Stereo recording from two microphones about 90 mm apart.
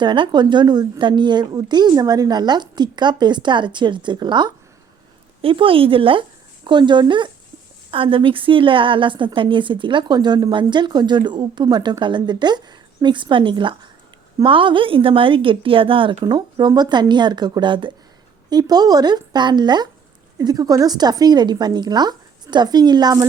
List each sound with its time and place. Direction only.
0.0 s a woman's voice: 55° right (ahead or behind)
5.4 s speech: 85° right
6.7 s a woman's voice: 60° right (ahead or behind)
7.9 s a woman's voice: 75° right (ahead or behind)
16.2 s a woman's voice: 55° right (ahead or behind)
18.5 s a woman's voice: 50° right (ahead or behind)